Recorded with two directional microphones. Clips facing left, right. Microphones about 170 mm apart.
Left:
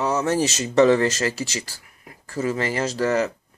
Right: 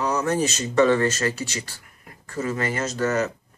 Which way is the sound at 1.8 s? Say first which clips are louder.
Left 2 dB; 45° right (ahead or behind).